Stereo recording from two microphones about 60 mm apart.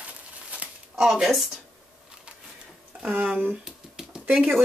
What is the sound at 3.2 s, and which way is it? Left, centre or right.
Speech, right.